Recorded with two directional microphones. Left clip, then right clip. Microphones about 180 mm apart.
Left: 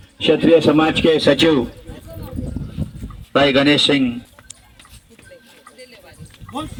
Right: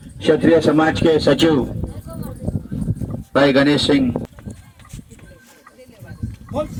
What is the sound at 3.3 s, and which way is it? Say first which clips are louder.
Speech: even; 35° left (ahead or behind).